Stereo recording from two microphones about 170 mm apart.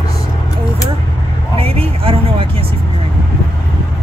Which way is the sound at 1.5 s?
35° right (ahead or behind).